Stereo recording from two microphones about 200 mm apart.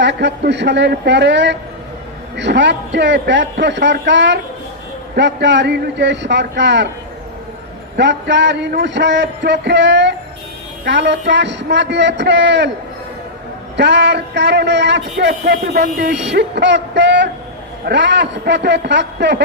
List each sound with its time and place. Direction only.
0.0 s a man's voice: 60° right (ahead or behind)
7.9 s a man's voice: 60° right (ahead or behind)
13.7 s a man's voice: 60° right (ahead or behind)